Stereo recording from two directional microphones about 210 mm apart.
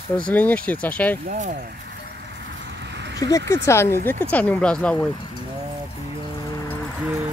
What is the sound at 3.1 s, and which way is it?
Speech, 15° left (ahead or behind).